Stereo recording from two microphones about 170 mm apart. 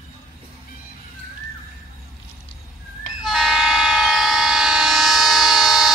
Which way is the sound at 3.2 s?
Centre (ahead or behind).